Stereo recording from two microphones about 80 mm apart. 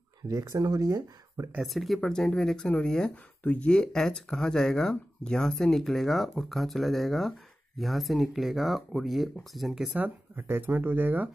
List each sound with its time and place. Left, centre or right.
0.3 s speech: right
1.6 s speech: centre
9.9 s speech: right